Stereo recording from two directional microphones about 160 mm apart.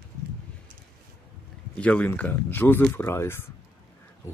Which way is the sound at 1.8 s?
10° left (ahead or behind).